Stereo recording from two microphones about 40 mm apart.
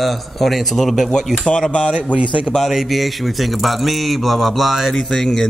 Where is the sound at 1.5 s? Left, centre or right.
Left.